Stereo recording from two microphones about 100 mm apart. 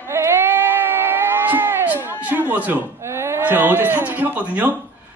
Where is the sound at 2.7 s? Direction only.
25° right (ahead or behind).